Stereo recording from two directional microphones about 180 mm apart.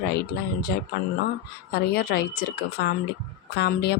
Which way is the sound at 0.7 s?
70° left (ahead or behind).